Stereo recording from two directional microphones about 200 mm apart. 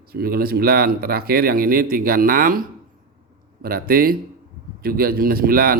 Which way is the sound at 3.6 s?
45° right (ahead or behind).